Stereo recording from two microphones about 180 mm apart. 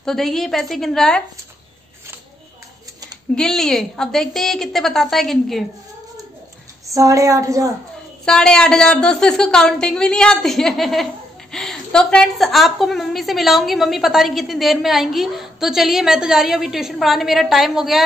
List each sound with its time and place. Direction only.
0.0 s a woman's voice: centre (ahead or behind)
3.3 s a woman's voice: 5° left (ahead or behind)
6.9 s a woman's voice: 15° right (ahead or behind)
8.3 s a woman's voice: 5° left (ahead or behind)